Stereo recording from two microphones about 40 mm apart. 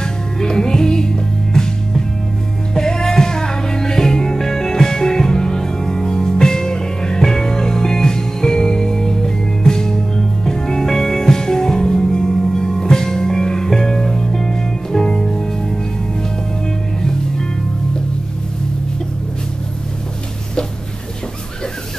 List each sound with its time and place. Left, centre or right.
0.0 s music: centre